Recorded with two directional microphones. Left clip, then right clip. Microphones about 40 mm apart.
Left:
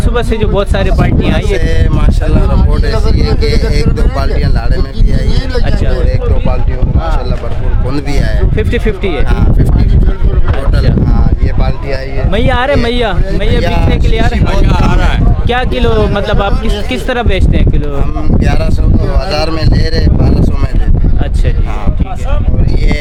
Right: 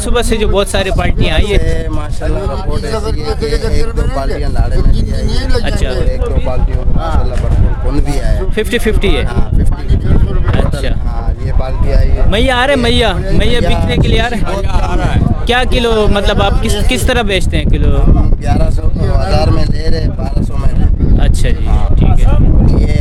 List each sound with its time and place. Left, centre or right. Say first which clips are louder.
0.1 s speech: right 1 dB; right
1.2 s speech: even; right
2.6 s speech: left 2 dB; right
8.5 s speech: right 2 dB; right
12.3 s speech: right 1 dB; right
13.9 s speech: right 1 dB; right
14.4 s speech: left 4 dB; centre
15.4 s speech: right 1 dB; right
18.3 s speech: left 2 dB; left